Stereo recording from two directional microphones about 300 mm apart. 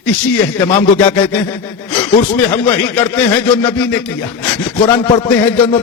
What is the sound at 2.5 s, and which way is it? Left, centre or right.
Speech, centre.